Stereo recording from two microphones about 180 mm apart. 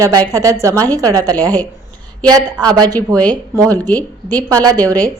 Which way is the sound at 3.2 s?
10° left (ahead or behind).